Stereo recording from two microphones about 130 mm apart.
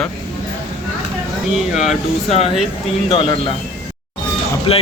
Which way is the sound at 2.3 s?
50° left (ahead or behind).